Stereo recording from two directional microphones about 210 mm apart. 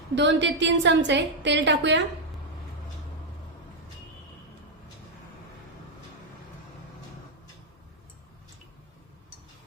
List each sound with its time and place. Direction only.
0.2 s a woman's voice: 55° right (ahead or behind)